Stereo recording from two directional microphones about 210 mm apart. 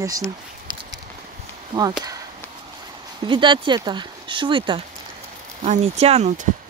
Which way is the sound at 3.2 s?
20° right (ahead or behind).